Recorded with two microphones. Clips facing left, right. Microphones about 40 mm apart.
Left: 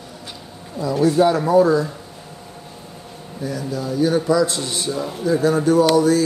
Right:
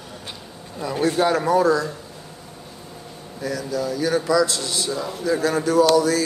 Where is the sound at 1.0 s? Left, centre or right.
Right.